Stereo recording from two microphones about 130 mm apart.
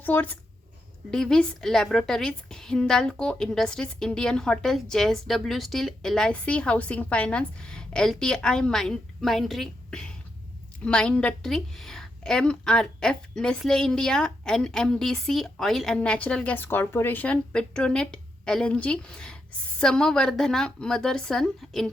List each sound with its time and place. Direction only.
0.0 s a woman's voice: 15° left (ahead or behind)